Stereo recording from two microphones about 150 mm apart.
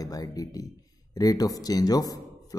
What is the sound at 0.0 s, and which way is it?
Speech, 25° left (ahead or behind).